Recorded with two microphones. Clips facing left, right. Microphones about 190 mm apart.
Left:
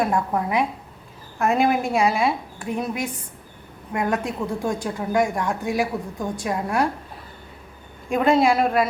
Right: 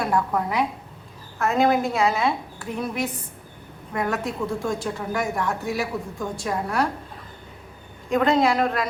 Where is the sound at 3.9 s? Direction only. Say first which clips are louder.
Left 2 dB; 20° left (ahead or behind).